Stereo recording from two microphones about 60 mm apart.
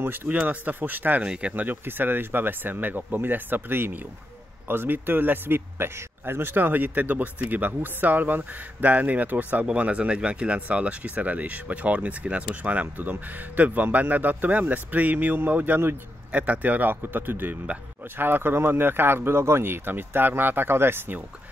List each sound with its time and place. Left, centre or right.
0.0 s speech: right
0.3 s speech: right
1.2 s speech: centre
1.5 s speech: right